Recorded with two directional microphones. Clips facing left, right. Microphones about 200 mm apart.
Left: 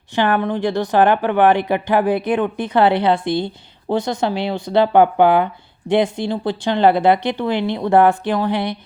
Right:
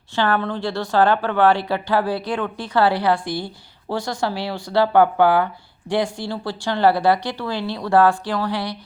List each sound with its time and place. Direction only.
0.2 s speech: 15° left (ahead or behind)